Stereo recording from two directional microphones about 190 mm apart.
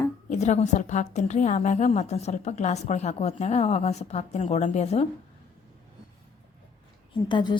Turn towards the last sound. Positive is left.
turn(degrees=25)  # may be behind; listen again after turning